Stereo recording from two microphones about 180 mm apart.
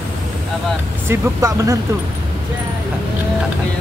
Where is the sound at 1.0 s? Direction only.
15° right (ahead or behind).